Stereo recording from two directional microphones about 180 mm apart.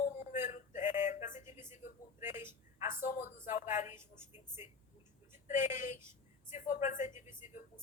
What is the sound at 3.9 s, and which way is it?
Speech, 15° right (ahead or behind).